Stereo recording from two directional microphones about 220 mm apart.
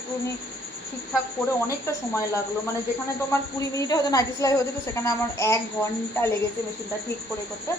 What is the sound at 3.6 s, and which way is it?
A woman's voice, 15° left (ahead or behind).